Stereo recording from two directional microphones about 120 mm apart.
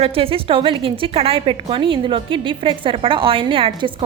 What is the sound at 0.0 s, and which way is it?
A woman's voice, 50° right (ahead or behind).